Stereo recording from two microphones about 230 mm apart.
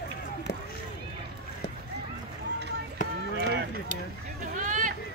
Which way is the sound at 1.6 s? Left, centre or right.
Left.